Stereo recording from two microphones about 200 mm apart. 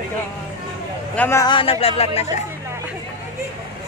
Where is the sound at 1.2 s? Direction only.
15° left (ahead or behind); by 2.3 s 30° left (ahead or behind).